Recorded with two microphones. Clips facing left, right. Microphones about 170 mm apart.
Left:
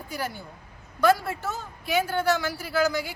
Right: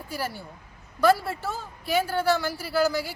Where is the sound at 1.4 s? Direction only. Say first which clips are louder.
Even; 30° right (ahead or behind).